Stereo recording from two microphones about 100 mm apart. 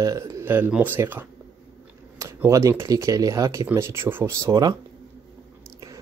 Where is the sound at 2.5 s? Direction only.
30° right (ahead or behind).